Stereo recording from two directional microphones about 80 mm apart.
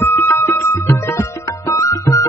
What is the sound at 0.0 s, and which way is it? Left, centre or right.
Music, left.